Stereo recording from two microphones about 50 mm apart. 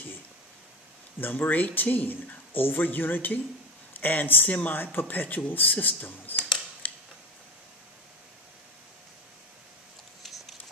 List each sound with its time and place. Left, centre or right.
1.2 s speech: left
6.8 s mechanisms: left